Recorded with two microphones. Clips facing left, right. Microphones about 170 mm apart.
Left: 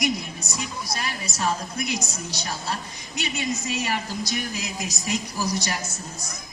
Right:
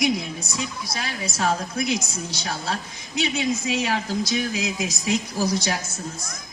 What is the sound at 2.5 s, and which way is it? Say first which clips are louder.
A man's voice: right 2 dB; 90° right.